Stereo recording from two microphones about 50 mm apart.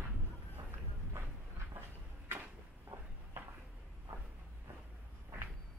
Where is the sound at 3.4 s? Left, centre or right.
Right.